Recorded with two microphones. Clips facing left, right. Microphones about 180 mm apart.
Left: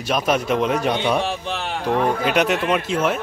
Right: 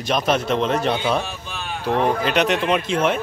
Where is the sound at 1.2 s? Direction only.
75° left (ahead or behind).